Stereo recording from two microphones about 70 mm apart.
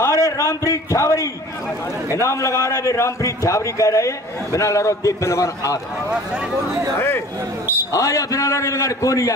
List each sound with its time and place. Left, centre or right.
0.0 s a man's voice: left
7.0 s speech: left
7.9 s a man's voice: left